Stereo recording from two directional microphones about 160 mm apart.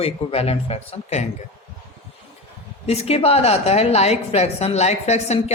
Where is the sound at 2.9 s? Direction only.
40° left (ahead or behind).